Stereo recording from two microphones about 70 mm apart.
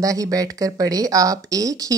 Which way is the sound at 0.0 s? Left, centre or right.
Right.